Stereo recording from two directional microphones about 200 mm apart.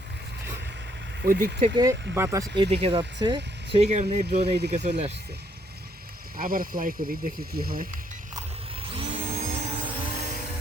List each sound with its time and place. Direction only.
1.2 s speech: 45° right (ahead or behind)
1.6 s speech: 20° right (ahead or behind)
2.6 s speech: 30° right (ahead or behind)
6.3 s speech: 45° right (ahead or behind)
8.9 s a sound: 30° right (ahead or behind)